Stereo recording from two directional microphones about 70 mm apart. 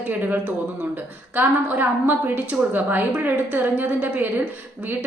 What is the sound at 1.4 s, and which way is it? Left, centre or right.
A woman's voice, right.